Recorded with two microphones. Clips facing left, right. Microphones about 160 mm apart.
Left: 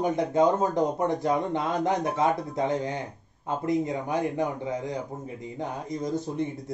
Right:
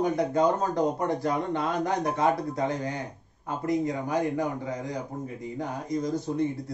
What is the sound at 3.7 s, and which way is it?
Speech, 25° left (ahead or behind).